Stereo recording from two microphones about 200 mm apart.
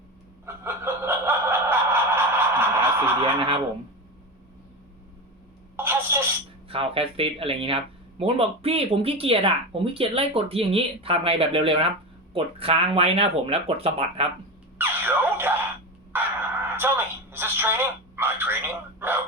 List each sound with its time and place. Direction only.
0.4 s snicker: 10° right (ahead or behind)
5.7 s telephone: 10° right (ahead or behind)
6.7 s speech: 30° right (ahead or behind)
14.8 s a sound: 10° right (ahead or behind)
16.1 s telephone: 10° right (ahead or behind)